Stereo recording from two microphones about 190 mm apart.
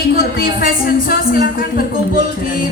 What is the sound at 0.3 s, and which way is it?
A woman's voice, 50° left (ahead or behind).